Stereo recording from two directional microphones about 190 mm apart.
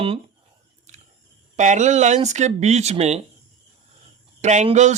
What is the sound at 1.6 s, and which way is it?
Speech, 40° right (ahead or behind).